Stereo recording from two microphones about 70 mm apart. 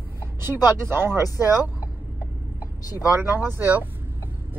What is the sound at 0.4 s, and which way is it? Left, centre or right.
Speech, right.